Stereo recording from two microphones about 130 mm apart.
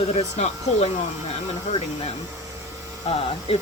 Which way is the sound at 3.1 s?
50° left (ahead or behind).